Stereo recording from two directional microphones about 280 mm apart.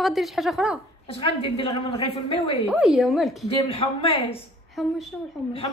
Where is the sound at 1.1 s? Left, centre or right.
Centre.